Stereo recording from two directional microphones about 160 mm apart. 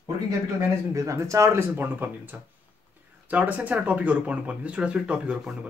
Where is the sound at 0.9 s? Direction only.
20° right (ahead or behind).